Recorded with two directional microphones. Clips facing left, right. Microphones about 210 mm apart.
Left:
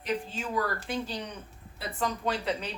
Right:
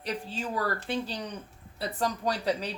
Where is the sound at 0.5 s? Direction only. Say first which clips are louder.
Even; 35° right (ahead or behind).